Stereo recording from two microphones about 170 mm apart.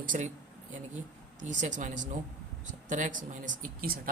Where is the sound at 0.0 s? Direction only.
50° right (ahead or behind).